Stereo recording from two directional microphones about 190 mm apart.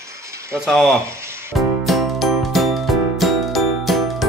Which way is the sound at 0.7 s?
Centre (ahead or behind).